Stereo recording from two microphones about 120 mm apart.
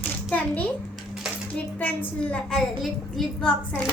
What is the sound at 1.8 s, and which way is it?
A woman's voice, 10° left (ahead or behind).